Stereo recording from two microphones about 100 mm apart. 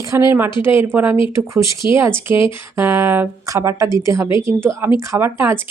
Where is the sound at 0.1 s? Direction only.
30° right (ahead or behind).